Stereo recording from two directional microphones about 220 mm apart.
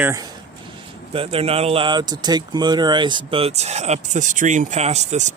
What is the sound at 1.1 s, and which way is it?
Speech, 25° right (ahead or behind).